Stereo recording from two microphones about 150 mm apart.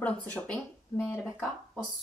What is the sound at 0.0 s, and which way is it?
Speech, 10° left (ahead or behind).